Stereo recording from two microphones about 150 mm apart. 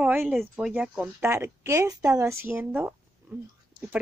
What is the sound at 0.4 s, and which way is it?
Speech, centre (ahead or behind).